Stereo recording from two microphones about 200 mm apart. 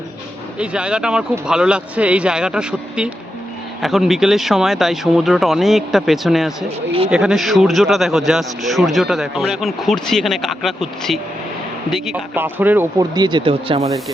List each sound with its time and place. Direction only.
0.6 s a man's voice: 5° right (ahead or behind); by 13.8 s 25° right (ahead or behind)